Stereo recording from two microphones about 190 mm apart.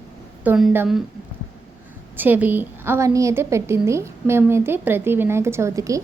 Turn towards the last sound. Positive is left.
turn(degrees=-15)  # may be behind; listen again after turning